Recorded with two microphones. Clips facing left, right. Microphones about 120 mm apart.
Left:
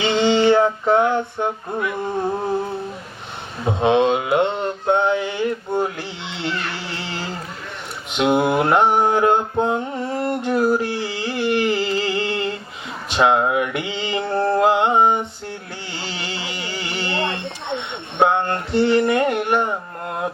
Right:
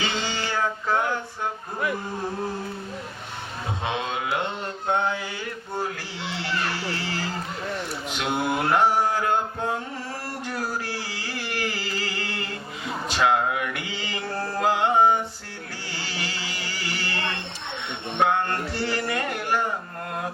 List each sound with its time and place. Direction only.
0.0 s music: 20° left (ahead or behind)
4.1 s mantra: 25° left (ahead or behind)
7.0 s a sound: 20° left (ahead or behind)
8.1 s music: 20° left (ahead or behind)
9.0 s mantra: 25° left (ahead or behind)
13.1 s a sound: 20° left (ahead or behind)
16.0 s music: 25° left (ahead or behind)